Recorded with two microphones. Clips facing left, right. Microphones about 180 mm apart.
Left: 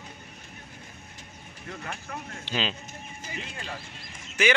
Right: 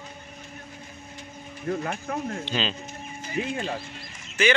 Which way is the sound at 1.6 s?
45° right (ahead or behind).